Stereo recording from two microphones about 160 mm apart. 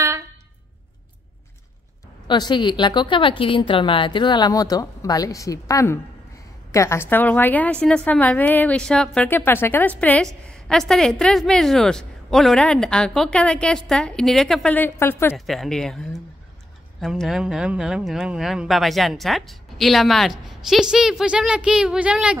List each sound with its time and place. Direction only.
2.2 s a woman's voice: 30° left (ahead or behind)
15.3 s a woman's voice: centre (ahead or behind)